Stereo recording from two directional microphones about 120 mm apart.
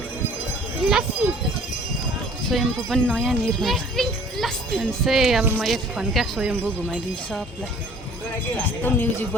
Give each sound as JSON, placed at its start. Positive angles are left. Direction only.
{"t": 0.8, "sound": "a sound", "side_deg": -5}
{"t": 2.5, "sound": "speech", "side_deg": 0}
{"t": 8.5, "sound": "speech", "side_deg": 15}